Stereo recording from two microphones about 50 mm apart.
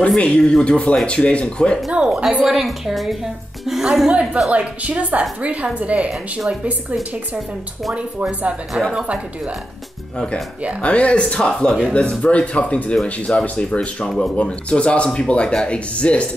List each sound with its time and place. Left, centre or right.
0.2 s speech: centre
1.9 s a woman's voice: right
2.4 s a woman's voice: centre
4.1 s a woman's voice: right
10.8 s speech: left